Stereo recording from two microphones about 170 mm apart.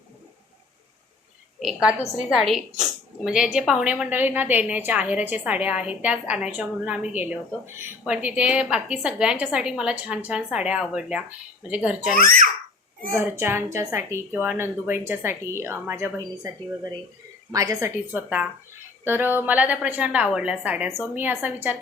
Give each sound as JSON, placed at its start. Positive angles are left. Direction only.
{"t": 1.5, "sound": "a woman's voice", "side_deg": -5}
{"t": 12.1, "sound": "a child's voice", "side_deg": -55}
{"t": 13.1, "sound": "a woman's voice", "side_deg": -15}
{"t": 17.5, "sound": "a woman's voice", "side_deg": -20}